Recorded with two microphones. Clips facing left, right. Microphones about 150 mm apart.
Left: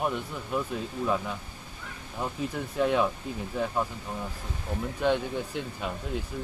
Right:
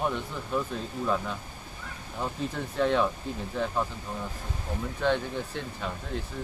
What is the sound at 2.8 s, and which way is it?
Speech, 10° left (ahead or behind).